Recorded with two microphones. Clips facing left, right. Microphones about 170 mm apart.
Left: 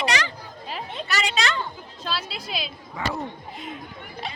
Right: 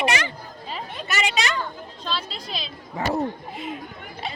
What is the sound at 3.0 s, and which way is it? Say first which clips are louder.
Speech: right 4 dB; 40° right (ahead or behind).